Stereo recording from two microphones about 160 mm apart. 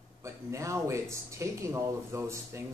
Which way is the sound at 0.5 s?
20° right (ahead or behind).